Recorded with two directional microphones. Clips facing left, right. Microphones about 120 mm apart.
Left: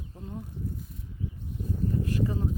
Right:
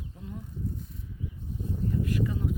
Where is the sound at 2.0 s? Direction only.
35° left (ahead or behind).